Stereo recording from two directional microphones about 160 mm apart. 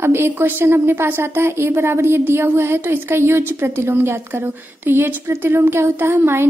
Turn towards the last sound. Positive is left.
turn(degrees=-15)  # may be behind; listen again after turning